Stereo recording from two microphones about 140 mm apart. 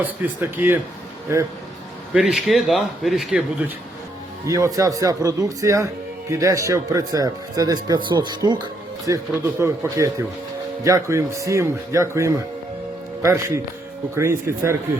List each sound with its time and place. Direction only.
0.0 s speech: 15° right (ahead or behind)
2.1 s speech: 5° right (ahead or behind)
4.4 s speech: 25° right (ahead or behind)